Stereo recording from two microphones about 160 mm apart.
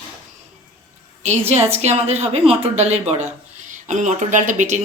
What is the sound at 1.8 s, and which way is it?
Speech, 45° right (ahead or behind).